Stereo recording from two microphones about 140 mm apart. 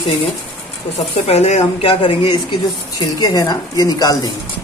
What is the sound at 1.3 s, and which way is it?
Speech, 50° left (ahead or behind).